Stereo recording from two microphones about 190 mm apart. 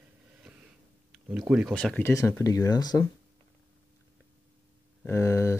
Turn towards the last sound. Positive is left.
turn(degrees=15)  # may be behind; listen again after turning